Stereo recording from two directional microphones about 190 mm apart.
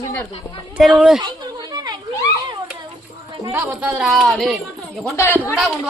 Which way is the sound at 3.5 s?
10° right (ahead or behind).